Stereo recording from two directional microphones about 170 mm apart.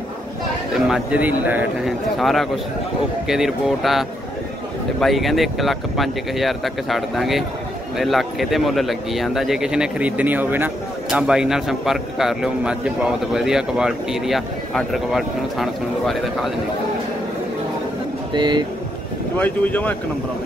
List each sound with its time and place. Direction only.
0.7 s speech: centre (ahead or behind)
5.0 s speech: centre (ahead or behind)
18.3 s speech: 25° right (ahead or behind)
19.3 s speech: 10° left (ahead or behind)